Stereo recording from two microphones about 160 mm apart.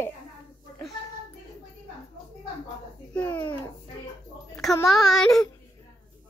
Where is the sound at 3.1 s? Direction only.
10° left (ahead or behind).